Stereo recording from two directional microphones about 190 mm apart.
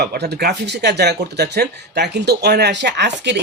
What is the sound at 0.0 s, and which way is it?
Speech, 55° right (ahead or behind).